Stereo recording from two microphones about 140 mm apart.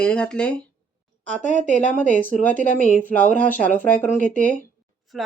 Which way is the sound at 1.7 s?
60° left (ahead or behind).